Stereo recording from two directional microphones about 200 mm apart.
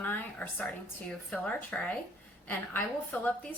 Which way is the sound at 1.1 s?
5° left (ahead or behind).